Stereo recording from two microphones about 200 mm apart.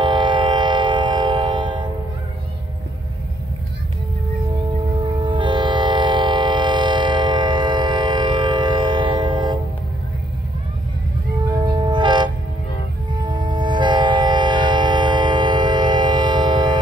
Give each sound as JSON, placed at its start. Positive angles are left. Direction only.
{"t": 0.0, "sound": "train", "side_deg": -25}
{"t": 5.0, "sound": "train", "side_deg": -25}
{"t": 11.4, "sound": "train", "side_deg": -20}